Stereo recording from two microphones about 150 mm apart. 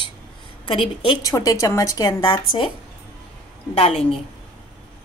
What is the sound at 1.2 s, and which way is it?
Speech, 25° left (ahead or behind).